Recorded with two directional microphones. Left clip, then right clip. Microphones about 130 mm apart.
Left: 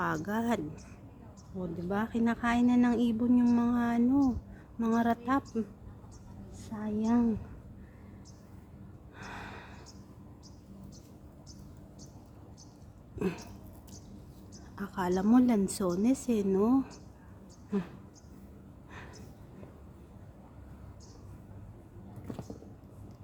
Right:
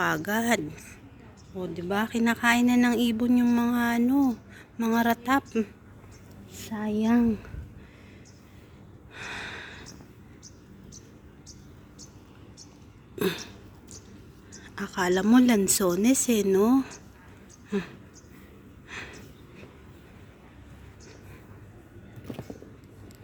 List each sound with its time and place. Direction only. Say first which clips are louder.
0.0 s speech: right 6 dB; 15° right (ahead or behind)
6.5 s a woman's voice: right 7 dB; 55° right (ahead or behind)
9.1 s gasp: right 8 dB; centre (ahead or behind)
13.1 s a sound: right 7 dB; 15° right (ahead or behind)
14.8 s a woman's voice: right 6 dB; 15° right (ahead or behind)
17.7 s speech: right 5 dB; 5° right (ahead or behind)
18.9 s gasp: right 10 dB; 5° left (ahead or behind)